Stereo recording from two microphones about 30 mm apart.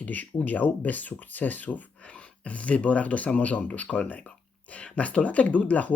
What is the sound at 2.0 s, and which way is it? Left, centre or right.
Speech, left.